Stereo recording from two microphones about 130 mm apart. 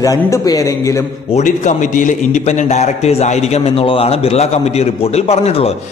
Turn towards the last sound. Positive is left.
turn(degrees=55)  # may be behind; listen again after turning